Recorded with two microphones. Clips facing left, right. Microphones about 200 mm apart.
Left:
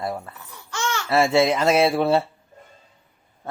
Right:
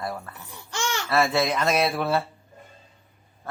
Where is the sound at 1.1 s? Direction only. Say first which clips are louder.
Left 5 dB; 25° left (ahead or behind).